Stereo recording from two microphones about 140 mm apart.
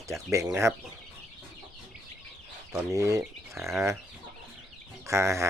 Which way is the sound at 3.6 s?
Centre (ahead or behind).